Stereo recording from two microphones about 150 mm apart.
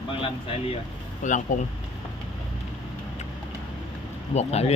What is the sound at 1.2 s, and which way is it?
Speech, 55° left (ahead or behind).